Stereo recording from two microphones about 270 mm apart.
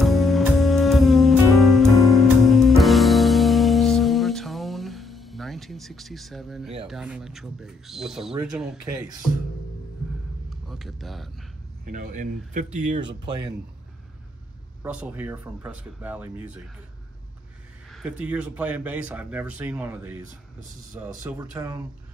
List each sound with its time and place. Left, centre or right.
0.0 s music: centre
6.8 s speech: centre
10.5 s a sound: centre
11.8 s speech: right
14.8 s speech: centre
17.9 s speech: centre